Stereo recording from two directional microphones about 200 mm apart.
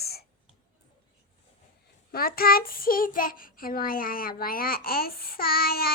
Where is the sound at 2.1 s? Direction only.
50° left (ahead or behind).